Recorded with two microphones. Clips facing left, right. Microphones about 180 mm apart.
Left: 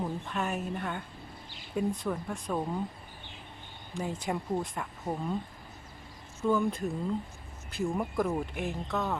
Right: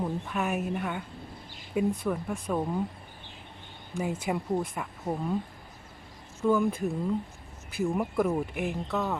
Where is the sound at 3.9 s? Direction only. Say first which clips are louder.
Right 3 dB; 5° right (ahead or behind).